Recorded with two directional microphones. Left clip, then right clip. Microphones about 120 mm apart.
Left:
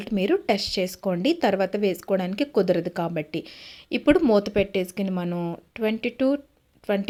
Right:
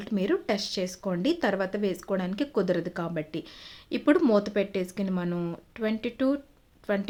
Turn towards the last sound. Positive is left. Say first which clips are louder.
# left 4 dB
turn(degrees=25)  # may be behind; listen again after turning